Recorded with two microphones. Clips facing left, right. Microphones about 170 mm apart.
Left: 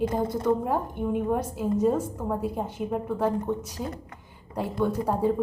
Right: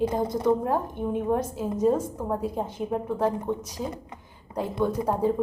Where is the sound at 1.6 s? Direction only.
15° right (ahead or behind).